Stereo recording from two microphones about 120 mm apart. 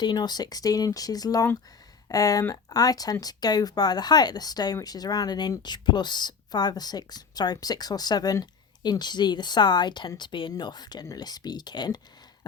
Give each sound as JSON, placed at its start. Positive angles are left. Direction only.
{"t": 0.0, "sound": "speech", "side_deg": 35}